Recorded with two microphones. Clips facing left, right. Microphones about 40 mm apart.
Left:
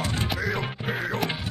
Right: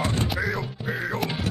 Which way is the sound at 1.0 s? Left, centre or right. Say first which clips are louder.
Even; centre.